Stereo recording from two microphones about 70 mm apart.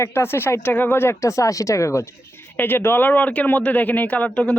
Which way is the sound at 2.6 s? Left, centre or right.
Left.